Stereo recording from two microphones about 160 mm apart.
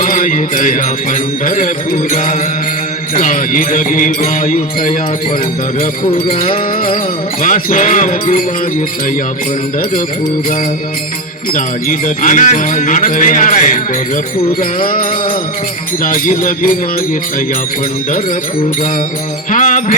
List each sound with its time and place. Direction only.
0.0 s music: 55° left (ahead or behind)
1.5 s jingle bell: 55° left (ahead or behind)
6.2 s jingle bell: 60° left (ahead or behind)
11.5 s jingle bell: 55° left (ahead or behind)
16.0 s jingle bell: 60° left (ahead or behind)
19.5 s music: 55° left (ahead or behind)